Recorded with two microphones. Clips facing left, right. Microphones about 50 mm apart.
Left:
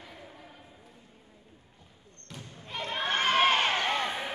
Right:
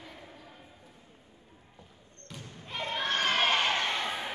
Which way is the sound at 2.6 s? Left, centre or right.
Centre.